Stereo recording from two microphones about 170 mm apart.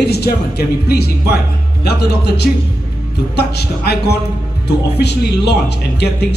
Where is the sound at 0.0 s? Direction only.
70° left (ahead or behind).